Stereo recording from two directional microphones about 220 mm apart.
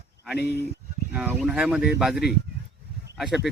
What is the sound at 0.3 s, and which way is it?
Speech, 50° left (ahead or behind).